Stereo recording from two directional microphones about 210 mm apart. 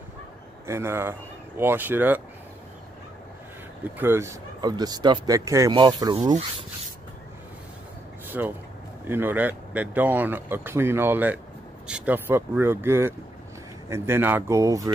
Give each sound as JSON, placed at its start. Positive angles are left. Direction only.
{"t": 0.7, "sound": "speech", "side_deg": -10}
{"t": 3.8, "sound": "speech", "side_deg": -10}
{"t": 8.3, "sound": "speech", "side_deg": -10}